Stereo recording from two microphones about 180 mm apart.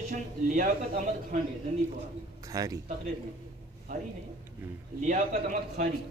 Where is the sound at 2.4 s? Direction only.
20° right (ahead or behind).